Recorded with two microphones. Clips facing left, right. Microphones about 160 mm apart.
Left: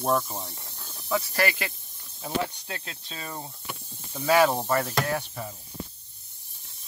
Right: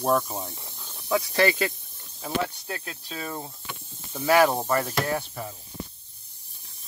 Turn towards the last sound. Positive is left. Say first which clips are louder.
# right 1 dB
turn(degrees=-5)  # may be behind; listen again after turning